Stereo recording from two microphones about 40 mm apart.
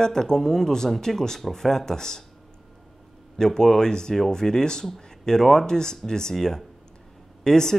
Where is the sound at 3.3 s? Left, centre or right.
Centre.